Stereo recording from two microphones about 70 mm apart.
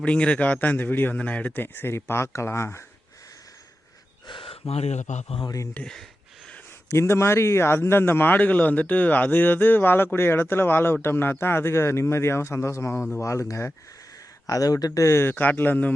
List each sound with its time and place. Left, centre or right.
0.0 s a man's voice: centre; by 2.6 s left
5.8 s speech: centre
6.8 s a man's voice: left
14.4 s speech: left
15.0 s a man's voice: left